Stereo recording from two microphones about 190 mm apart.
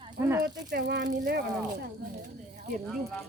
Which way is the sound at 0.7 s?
65° right (ahead or behind).